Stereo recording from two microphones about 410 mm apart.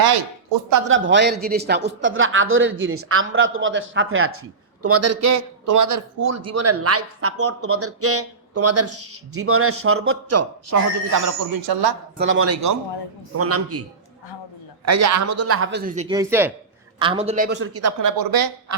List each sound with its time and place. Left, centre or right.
0.9 s a man's voice: right
12.1 s a man's voice: right
14.8 s a man's voice: right
18.2 s speech: right